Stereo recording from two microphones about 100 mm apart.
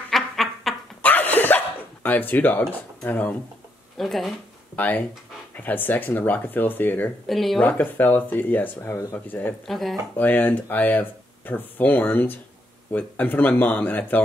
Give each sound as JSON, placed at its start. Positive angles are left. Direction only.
{"t": 0.1, "sound": "duck", "side_deg": 0}
{"t": 1.0, "sound": "a sound", "side_deg": 20}
{"t": 2.0, "sound": "speech", "side_deg": 20}
{"t": 4.0, "sound": "speech", "side_deg": 0}
{"t": 4.7, "sound": "speech", "side_deg": 15}
{"t": 7.2, "sound": "speech", "side_deg": 0}
{"t": 7.6, "sound": "speech", "side_deg": 15}
{"t": 8.9, "sound": "speech", "side_deg": 35}
{"t": 9.7, "sound": "speech", "side_deg": 0}
{"t": 10.1, "sound": "speech", "side_deg": 15}